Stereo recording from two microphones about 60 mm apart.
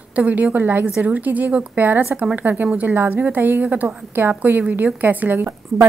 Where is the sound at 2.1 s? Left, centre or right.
Centre.